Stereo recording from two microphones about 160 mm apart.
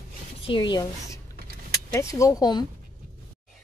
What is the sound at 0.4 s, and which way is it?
A woman's voice, 30° left (ahead or behind).